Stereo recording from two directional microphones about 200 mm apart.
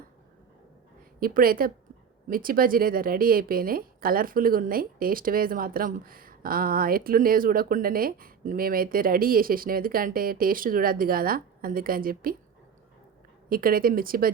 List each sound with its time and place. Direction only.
1.2 s speech: 45° right (ahead or behind)
13.5 s speech: 45° right (ahead or behind)